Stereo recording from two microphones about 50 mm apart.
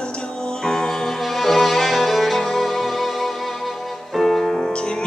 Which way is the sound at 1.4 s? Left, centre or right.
Centre.